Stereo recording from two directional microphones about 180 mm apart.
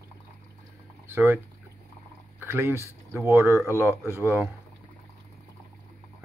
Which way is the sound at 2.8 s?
15° right (ahead or behind).